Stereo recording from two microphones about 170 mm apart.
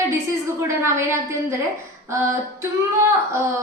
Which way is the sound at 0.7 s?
15° right (ahead or behind).